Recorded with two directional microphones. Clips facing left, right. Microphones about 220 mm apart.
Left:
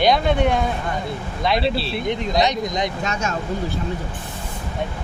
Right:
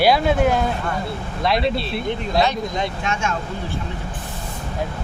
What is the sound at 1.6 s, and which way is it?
Speech, 30° left (ahead or behind).